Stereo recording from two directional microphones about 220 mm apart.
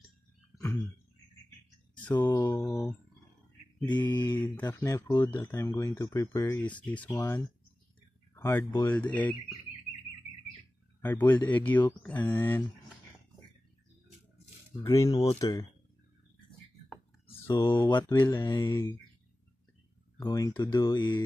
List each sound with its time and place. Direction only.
2.2 s mantra: 10° left (ahead or behind)
3.9 s mantra: 20° left (ahead or behind)
4.6 s speech: 15° left (ahead or behind)
11.0 s speech: 10° left (ahead or behind)
14.9 s speech: 15° left (ahead or behind)
17.5 s speech: 15° left (ahead or behind)
20.2 s speech: 15° left (ahead or behind)